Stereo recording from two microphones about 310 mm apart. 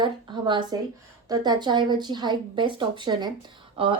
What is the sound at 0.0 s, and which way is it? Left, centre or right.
A woman's voice, centre.